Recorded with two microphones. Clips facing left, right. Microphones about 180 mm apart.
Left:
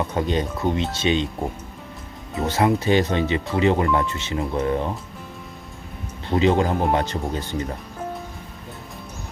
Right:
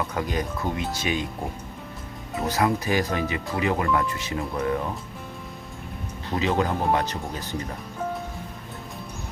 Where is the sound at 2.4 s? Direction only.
25° left (ahead or behind).